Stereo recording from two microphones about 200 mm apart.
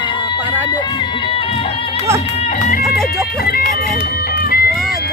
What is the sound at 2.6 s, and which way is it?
Music, 45° left (ahead or behind).